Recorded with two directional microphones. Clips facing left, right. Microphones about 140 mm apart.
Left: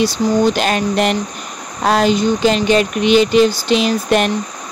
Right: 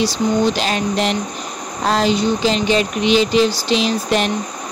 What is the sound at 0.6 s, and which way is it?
Speech, 55° left (ahead or behind).